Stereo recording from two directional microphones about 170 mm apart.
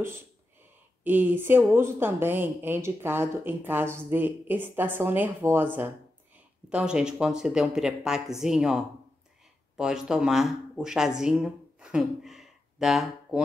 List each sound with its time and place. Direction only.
1.0 s speech: 10° right (ahead or behind)